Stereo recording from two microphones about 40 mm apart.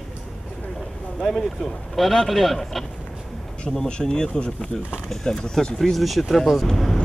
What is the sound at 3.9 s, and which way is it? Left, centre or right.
Speech, centre.